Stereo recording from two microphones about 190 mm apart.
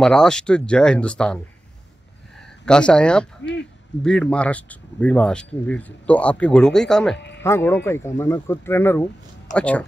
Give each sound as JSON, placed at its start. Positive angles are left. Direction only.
{"t": 0.0, "sound": "speech", "side_deg": 5}
{"t": 2.6, "sound": "speech", "side_deg": 5}
{"t": 7.2, "sound": "music", "side_deg": 65}
{"t": 7.4, "sound": "speech", "side_deg": 15}